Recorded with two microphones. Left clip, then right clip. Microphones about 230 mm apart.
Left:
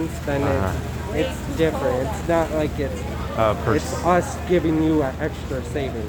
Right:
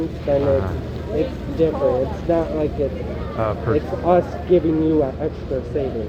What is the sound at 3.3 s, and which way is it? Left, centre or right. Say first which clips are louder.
Speech: left 1 dB; left.